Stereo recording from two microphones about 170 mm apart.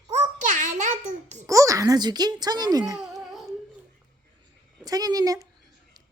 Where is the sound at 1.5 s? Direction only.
20° right (ahead or behind).